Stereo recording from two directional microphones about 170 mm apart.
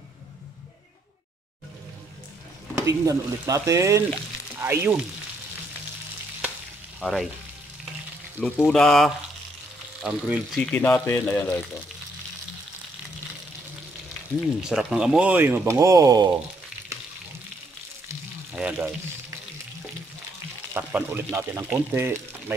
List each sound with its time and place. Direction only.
2.8 s speech: 20° right (ahead or behind)
7.0 s frying: centre (ahead or behind)
8.4 s speech: 5° left (ahead or behind)
10.6 s speech: 10° left (ahead or behind)
14.7 s speech: 5° right (ahead or behind); by 16.3 s 20° right (ahead or behind)
18.0 s frying: 10° right (ahead or behind)
20.7 s speech: 10° right (ahead or behind)